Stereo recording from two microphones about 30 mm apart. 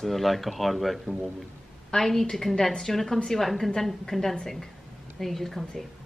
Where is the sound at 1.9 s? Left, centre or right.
Centre.